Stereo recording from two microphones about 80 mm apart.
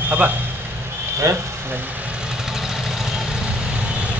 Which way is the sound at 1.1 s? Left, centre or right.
Right.